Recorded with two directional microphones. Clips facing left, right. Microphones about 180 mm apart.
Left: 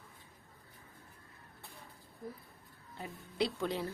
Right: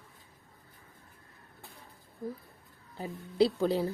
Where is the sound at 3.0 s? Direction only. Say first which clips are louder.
Right 9 dB; 35° right (ahead or behind).